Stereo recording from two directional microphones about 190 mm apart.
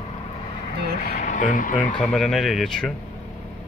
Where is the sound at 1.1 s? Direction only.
45° left (ahead or behind).